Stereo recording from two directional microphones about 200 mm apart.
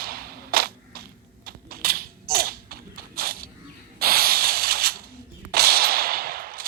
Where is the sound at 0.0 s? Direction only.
50° right (ahead or behind).